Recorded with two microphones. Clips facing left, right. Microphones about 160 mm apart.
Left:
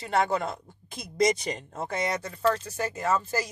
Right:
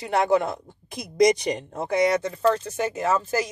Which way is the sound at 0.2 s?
15° right (ahead or behind).